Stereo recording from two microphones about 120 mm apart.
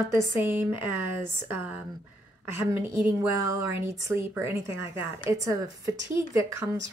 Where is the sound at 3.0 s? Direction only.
25° right (ahead or behind).